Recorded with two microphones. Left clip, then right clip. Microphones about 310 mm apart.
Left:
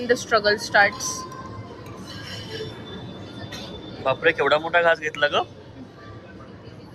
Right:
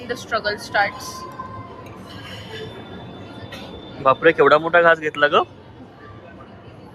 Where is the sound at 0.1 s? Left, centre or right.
Left.